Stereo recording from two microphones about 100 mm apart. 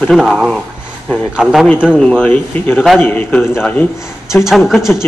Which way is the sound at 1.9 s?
10° left (ahead or behind).